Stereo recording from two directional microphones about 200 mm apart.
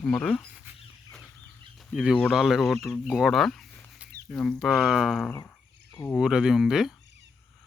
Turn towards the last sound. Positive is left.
turn(degrees=0)  # may be behind; listen again after turning